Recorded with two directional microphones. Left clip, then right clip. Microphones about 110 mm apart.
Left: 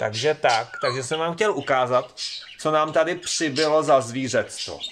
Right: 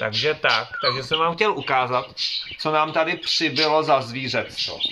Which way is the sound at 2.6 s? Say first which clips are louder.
Left 1 dB; 90° left.